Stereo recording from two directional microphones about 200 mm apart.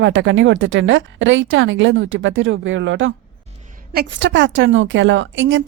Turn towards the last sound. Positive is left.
turn(degrees=-70)  # may be behind; listen again after turning